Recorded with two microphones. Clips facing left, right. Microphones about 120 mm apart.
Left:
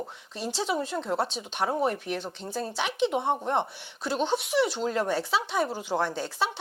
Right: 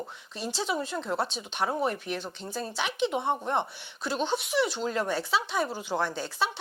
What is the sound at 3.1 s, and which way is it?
Speech, 35° left (ahead or behind).